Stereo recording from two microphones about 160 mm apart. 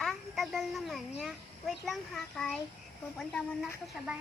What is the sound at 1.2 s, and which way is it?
A child's voice, centre (ahead or behind).